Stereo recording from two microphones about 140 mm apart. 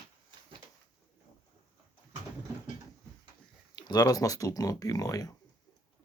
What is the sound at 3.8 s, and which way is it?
Speech, 30° left (ahead or behind).